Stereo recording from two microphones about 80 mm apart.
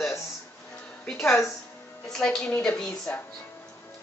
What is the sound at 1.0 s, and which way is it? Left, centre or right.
A woman's voice, centre.